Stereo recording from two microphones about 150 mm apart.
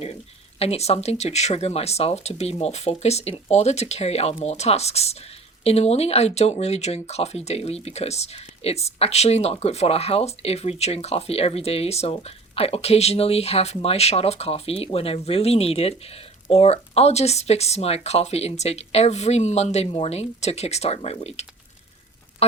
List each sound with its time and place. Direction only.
0.6 s speech: 45° left (ahead or behind)